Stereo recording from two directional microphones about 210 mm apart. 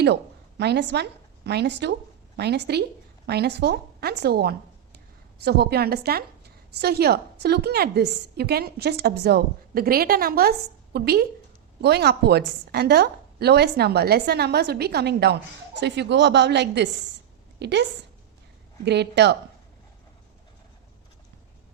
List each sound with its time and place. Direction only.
0.6 s a woman's voice: 55° right (ahead or behind)
18.9 s a woman's voice: 55° right (ahead or behind)